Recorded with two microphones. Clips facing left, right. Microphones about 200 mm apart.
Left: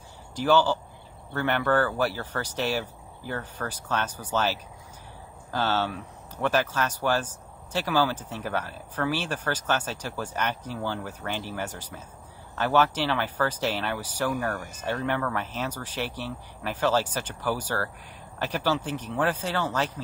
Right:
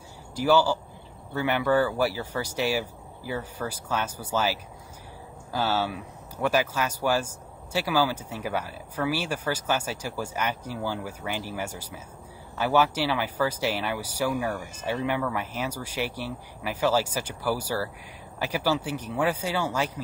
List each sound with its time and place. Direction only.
0.4 s speech: 10° right (ahead or behind)